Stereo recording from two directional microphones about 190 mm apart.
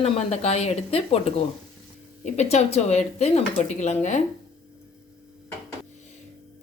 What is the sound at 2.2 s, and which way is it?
Speech, 35° left (ahead or behind).